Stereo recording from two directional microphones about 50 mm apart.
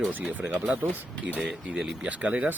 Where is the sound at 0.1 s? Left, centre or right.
Right.